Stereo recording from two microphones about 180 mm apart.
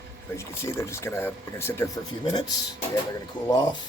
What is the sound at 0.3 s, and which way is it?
Speech, 15° left (ahead or behind).